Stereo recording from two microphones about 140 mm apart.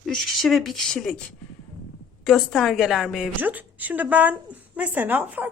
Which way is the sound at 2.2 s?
Centre (ahead or behind).